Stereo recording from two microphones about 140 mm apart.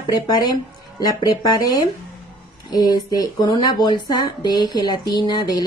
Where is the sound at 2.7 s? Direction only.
30° left (ahead or behind).